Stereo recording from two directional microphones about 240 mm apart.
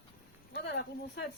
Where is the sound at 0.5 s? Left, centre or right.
Left.